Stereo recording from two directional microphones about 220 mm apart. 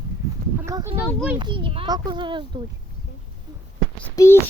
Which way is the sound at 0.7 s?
15° right (ahead or behind).